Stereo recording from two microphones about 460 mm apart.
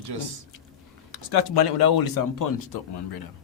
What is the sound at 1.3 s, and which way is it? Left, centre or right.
Speech, left.